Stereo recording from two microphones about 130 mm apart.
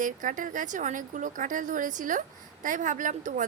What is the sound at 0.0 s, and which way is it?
Speech, 90° right.